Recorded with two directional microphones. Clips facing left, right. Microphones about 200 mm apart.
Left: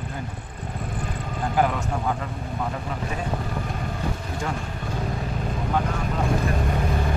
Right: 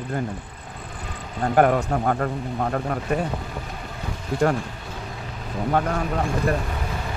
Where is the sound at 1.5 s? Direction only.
55° right (ahead or behind).